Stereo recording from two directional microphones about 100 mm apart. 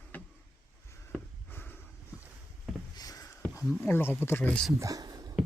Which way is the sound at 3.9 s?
25° left (ahead or behind).